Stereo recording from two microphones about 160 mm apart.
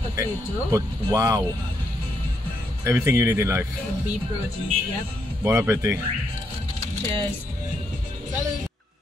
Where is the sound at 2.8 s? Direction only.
15° right (ahead or behind).